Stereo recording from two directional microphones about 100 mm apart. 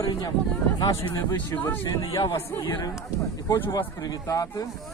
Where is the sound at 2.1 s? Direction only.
35° left (ahead or behind).